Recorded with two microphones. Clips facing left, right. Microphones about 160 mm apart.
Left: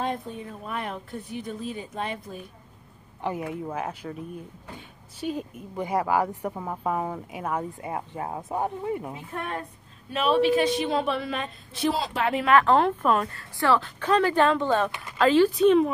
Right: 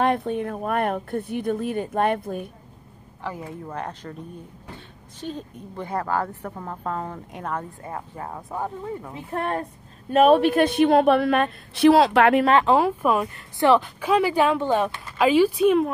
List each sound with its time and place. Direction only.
0.0 s speech: 70° right (ahead or behind)
3.6 s speech: 5° left (ahead or behind)
5.2 s a woman's voice: 10° left (ahead or behind)
9.3 s a woman's voice: 40° right (ahead or behind); by 12.4 s 65° right (ahead or behind)
12.6 s speech: 10° right (ahead or behind)